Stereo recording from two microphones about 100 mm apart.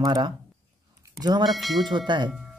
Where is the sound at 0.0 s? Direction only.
45° right (ahead or behind).